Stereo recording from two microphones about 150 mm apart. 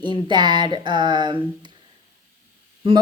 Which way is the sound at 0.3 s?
30° right (ahead or behind).